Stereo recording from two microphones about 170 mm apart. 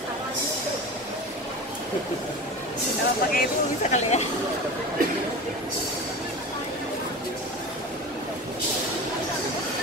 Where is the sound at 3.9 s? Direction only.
40° left (ahead or behind).